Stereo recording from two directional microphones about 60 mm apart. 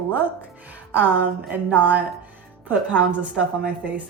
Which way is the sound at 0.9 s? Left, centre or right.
Right.